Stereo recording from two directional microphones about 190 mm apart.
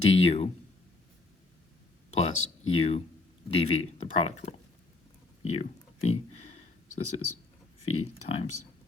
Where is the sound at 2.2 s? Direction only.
90° left.